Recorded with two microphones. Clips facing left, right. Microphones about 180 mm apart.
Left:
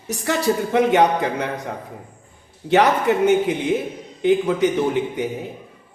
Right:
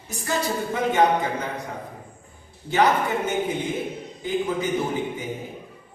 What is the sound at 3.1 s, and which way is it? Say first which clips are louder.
A man's voice: left 8 dB; 70° left (ahead or behind).